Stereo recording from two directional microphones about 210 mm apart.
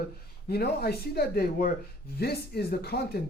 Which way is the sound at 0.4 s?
50° left (ahead or behind).